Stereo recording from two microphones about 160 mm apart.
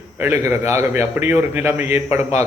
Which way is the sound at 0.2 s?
10° right (ahead or behind).